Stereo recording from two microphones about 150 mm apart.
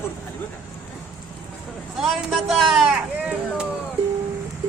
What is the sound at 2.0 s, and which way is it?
Speech, centre (ahead or behind).